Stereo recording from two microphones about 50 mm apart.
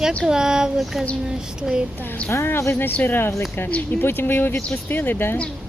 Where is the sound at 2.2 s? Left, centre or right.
Left.